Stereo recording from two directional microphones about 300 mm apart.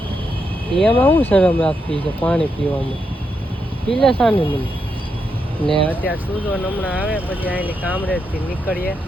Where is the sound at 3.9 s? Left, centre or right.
Centre.